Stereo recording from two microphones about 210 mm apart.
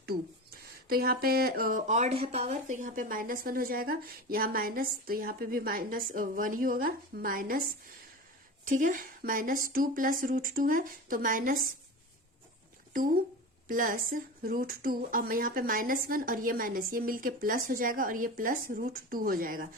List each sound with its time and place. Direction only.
0.9 s a woman's voice: 45° right (ahead or behind)
13.7 s speech: 40° right (ahead or behind)